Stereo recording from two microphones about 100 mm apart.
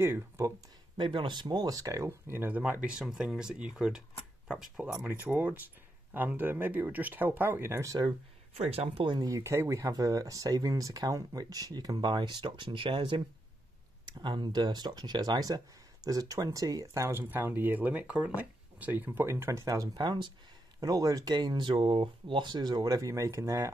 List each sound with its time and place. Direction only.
0.0 s speech: 25° right (ahead or behind)
0.9 s speech: 55° right (ahead or behind); by 4.9 s 5° right (ahead or behind)
5.0 s speech: 20° right (ahead or behind); by 8.1 s 35° right (ahead or behind)
8.5 s speech: 90° right
9.0 s speech: 50° right (ahead or behind)
9.3 s speech: 25° right (ahead or behind)
17.2 s speech: 20° right (ahead or behind); by 20.3 s 50° right (ahead or behind)
20.8 s speech: 35° right (ahead or behind)